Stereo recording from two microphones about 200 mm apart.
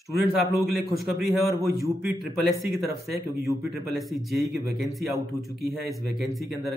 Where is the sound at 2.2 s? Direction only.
Centre (ahead or behind).